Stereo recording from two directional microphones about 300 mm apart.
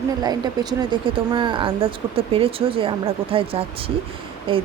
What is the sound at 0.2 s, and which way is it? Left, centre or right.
Speech, centre.